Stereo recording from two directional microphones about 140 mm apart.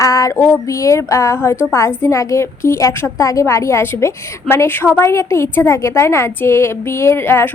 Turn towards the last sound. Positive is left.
turn(degrees=15)  # may be behind; listen again after turning